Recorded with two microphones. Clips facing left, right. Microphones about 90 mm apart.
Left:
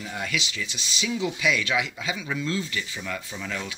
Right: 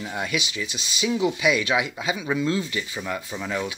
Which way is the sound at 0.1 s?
20° right (ahead or behind).